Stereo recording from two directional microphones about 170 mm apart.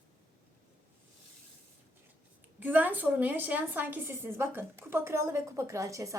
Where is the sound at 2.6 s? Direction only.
10° right (ahead or behind).